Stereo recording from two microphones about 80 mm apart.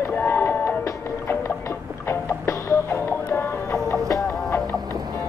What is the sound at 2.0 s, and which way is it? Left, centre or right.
Music, left.